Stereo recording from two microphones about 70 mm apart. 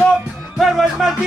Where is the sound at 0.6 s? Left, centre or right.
Centre.